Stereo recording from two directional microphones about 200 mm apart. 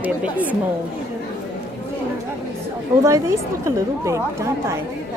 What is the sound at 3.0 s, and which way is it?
A woman's voice, 15° right (ahead or behind).